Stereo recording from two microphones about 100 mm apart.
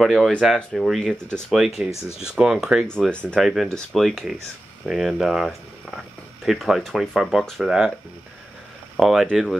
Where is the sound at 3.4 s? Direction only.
Centre (ahead or behind).